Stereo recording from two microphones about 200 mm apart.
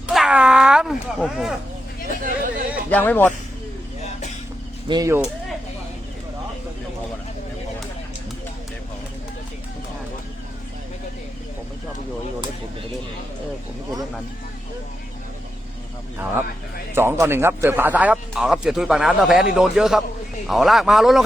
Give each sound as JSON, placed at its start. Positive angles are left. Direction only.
{"t": 0.1, "sound": "a sound", "side_deg": -5}
{"t": 2.2, "sound": "chatter", "side_deg": -45}
{"t": 2.9, "sound": "speech", "side_deg": 10}
{"t": 4.9, "sound": "speech", "side_deg": -15}
{"t": 16.9, "sound": "a man's voice", "side_deg": -10}